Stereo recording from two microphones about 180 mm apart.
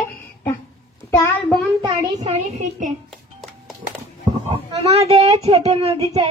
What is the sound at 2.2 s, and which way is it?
Speech, 40° right (ahead or behind).